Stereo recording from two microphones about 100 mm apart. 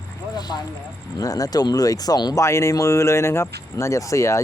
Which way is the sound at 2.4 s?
30° left (ahead or behind).